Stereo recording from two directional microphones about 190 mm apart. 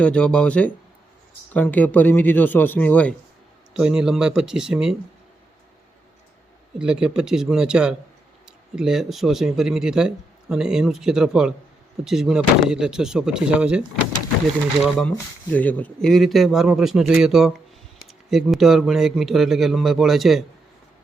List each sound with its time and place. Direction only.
0.0 s a man's voice: 5° left (ahead or behind)
3.8 s speech: 5° right (ahead or behind)
6.7 s speech: 5° right (ahead or behind)
14.8 s speech: 5° left (ahead or behind)